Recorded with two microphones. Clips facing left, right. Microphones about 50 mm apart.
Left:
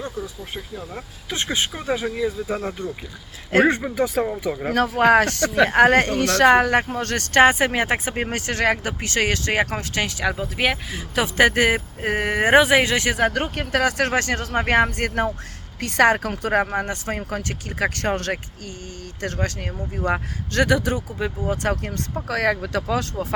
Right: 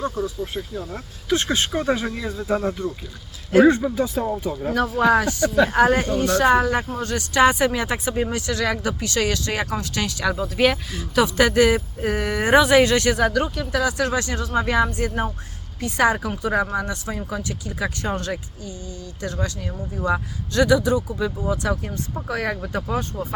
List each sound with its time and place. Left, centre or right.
0.0 s speech: centre
3.5 s speech: left
4.6 s speech: left
7.4 s speech: left
13.6 s speech: left
17.2 s speech: left
19.2 s speech: left
21.8 s speech: left